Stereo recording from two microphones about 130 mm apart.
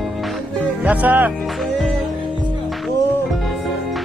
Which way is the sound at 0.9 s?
10° right (ahead or behind).